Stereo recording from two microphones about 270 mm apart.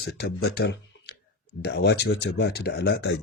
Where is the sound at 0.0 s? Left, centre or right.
Left.